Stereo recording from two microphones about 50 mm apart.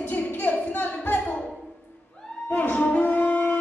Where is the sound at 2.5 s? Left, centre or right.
Left.